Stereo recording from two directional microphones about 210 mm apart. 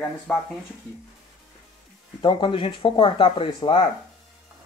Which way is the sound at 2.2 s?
25° left (ahead or behind).